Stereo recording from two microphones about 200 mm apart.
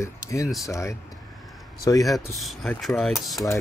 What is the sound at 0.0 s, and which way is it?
Speech, 15° left (ahead or behind).